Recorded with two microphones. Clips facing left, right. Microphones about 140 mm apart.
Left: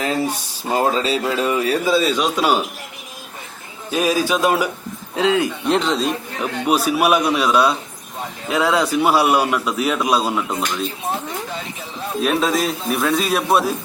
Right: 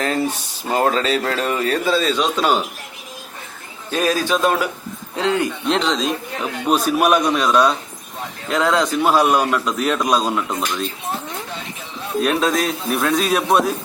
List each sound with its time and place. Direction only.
0.0 s speech: 10° left (ahead or behind)
3.9 s speech: 10° left (ahead or behind)
12.2 s a man's voice: centre (ahead or behind)